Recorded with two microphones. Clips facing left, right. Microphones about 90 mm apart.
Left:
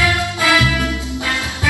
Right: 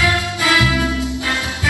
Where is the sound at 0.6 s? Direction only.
20° right (ahead or behind).